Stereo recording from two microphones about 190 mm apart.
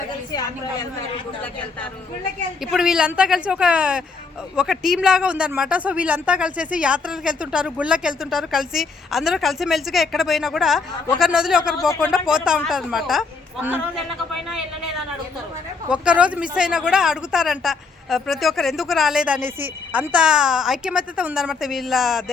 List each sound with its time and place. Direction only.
0.3 s a woman's voice: 20° left (ahead or behind)
2.7 s speech: 5° right (ahead or behind)
15.9 s speech: 5° right (ahead or behind)